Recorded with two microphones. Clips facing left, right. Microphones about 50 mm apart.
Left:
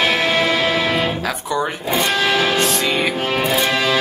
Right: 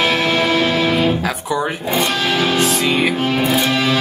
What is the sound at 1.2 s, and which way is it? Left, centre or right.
Music, centre.